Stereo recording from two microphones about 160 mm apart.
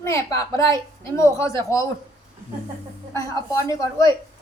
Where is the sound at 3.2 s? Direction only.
20° left (ahead or behind).